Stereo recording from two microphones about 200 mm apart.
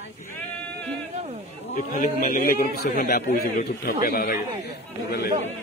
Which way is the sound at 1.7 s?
45° left (ahead or behind).